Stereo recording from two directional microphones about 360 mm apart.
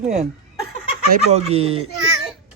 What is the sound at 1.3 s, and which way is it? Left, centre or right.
Speech, centre.